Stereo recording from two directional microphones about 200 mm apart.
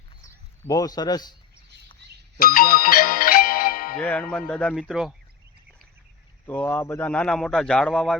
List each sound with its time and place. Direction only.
0.7 s a man's voice: 20° left (ahead or behind)
2.4 s music: 45° left (ahead or behind)
3.9 s a man's voice: 5° left (ahead or behind)
6.4 s a man's voice: 10° left (ahead or behind)